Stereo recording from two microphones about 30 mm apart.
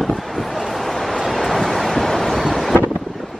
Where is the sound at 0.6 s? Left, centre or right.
Centre.